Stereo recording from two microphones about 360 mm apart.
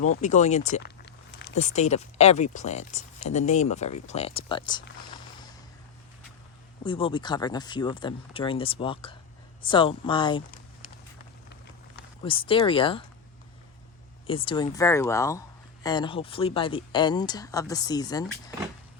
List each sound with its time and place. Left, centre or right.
0.2 s speech: centre
6.8 s speech: centre
12.2 s speech: centre
14.3 s speech: centre